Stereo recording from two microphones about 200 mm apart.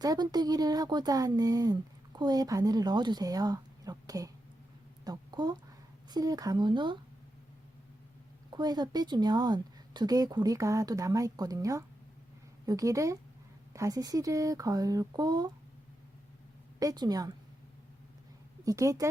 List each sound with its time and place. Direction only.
0.0 s speech: 20° right (ahead or behind)
8.5 s speech: 20° right (ahead or behind)
16.8 s speech: 20° right (ahead or behind)
18.6 s speech: 15° right (ahead or behind)